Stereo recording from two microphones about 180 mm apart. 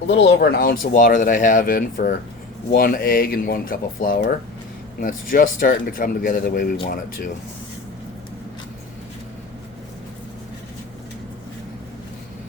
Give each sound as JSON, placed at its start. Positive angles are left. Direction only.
{"t": 0.1, "sound": "speech", "side_deg": 70}